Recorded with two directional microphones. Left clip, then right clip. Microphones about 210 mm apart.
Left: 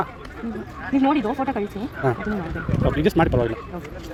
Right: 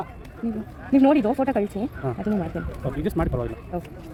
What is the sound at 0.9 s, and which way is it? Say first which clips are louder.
Speech: right 2 dB; 35° right (ahead or behind).